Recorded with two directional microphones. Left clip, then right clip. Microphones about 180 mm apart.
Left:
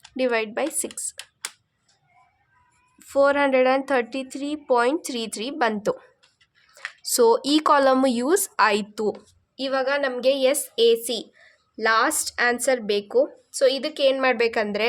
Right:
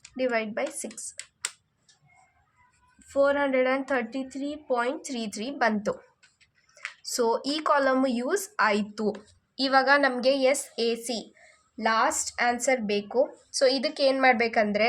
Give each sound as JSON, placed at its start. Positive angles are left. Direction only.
{"t": 0.2, "sound": "speech", "side_deg": 35}
{"t": 3.1, "sound": "speech", "side_deg": 45}
{"t": 7.1, "sound": "speech", "side_deg": 40}
{"t": 9.6, "sound": "a woman's voice", "side_deg": 5}
{"t": 10.2, "sound": "speech", "side_deg": 30}
{"t": 13.6, "sound": "a woman's voice", "side_deg": 20}